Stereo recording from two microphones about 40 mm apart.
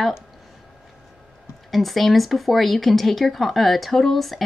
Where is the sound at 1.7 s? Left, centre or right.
Centre.